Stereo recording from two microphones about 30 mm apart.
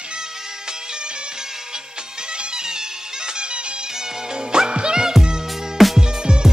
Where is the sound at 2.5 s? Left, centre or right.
Right.